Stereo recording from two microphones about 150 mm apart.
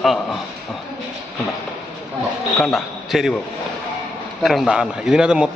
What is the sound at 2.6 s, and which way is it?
Speech, centre (ahead or behind).